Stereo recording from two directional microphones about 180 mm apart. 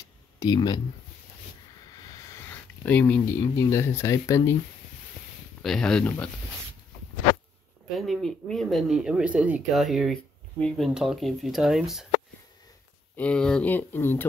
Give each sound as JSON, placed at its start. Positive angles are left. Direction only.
{"t": 0.4, "sound": "speech", "side_deg": 25}
{"t": 2.2, "sound": "a sound", "side_deg": 10}
{"t": 3.2, "sound": "speech", "side_deg": 15}
{"t": 5.6, "sound": "speech", "side_deg": 5}
{"t": 7.9, "sound": "speech", "side_deg": 0}
{"t": 13.1, "sound": "speech", "side_deg": 5}